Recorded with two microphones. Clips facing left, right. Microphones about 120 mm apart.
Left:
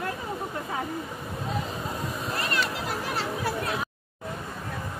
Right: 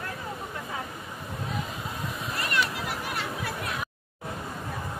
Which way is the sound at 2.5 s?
30° left (ahead or behind).